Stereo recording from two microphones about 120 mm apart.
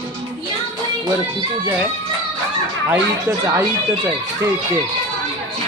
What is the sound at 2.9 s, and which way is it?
Speech, 20° right (ahead or behind).